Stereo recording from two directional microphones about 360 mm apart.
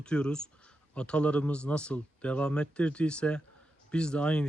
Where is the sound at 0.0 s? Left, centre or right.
Centre.